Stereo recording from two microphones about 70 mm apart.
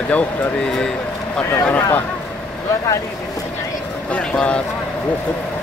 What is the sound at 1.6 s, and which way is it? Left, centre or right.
Speech, left.